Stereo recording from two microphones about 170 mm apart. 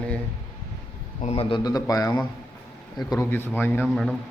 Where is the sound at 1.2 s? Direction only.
35° left (ahead or behind); by 3.8 s 10° left (ahead or behind).